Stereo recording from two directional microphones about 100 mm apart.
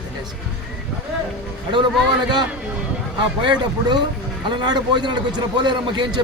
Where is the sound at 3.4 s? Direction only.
50° right (ahead or behind).